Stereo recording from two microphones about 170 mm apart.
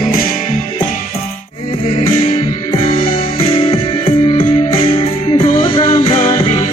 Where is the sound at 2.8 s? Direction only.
30° left (ahead or behind).